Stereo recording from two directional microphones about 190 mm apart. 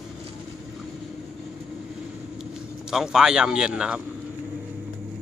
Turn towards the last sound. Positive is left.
turn(degrees=-5)  # may be behind; listen again after turning